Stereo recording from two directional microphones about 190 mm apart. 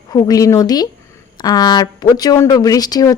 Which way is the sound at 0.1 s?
20° left (ahead or behind).